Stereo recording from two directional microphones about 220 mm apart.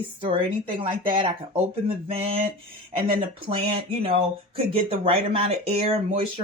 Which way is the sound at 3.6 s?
25° right (ahead or behind).